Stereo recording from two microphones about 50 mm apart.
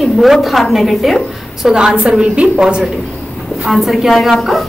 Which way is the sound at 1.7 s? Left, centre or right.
Centre.